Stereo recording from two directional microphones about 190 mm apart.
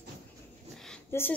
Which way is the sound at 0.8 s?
10° left (ahead or behind).